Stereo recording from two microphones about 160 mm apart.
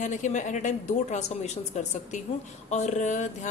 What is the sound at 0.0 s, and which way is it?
A woman's voice, 50° left (ahead or behind).